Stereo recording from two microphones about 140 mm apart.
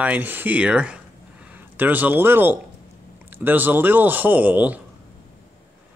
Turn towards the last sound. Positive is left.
turn(degrees=-10)  # may be behind; listen again after turning